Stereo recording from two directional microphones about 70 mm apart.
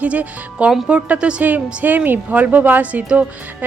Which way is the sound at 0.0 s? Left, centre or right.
Centre.